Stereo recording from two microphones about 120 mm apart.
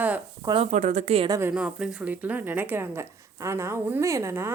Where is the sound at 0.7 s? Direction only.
75° right (ahead or behind).